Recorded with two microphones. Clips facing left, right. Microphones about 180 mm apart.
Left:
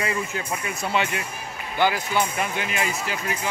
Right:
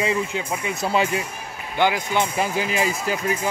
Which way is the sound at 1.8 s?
15° right (ahead or behind).